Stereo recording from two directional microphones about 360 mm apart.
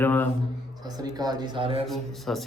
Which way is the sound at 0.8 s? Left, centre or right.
Centre.